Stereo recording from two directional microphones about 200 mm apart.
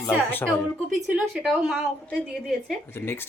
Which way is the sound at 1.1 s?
5° right (ahead or behind).